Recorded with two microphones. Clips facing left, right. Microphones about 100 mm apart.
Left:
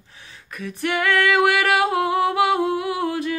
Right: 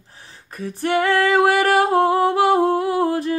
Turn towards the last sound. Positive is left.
turn(degrees=-40)  # may be behind; listen again after turning